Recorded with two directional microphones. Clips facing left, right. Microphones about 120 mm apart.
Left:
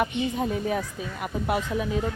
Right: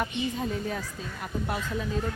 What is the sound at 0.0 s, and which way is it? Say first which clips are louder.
A woman's voice: left 4 dB; 15° left (ahead or behind).